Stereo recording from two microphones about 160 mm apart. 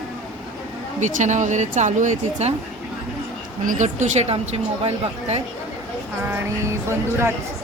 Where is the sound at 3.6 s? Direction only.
50° right (ahead or behind).